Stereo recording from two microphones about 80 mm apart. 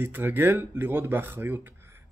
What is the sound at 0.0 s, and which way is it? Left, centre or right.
Speech, right.